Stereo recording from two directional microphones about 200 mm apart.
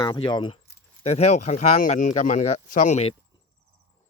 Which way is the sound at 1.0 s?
35° left (ahead or behind).